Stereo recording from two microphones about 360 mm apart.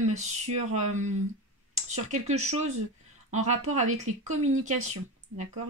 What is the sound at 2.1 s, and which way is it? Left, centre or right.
Speech, centre.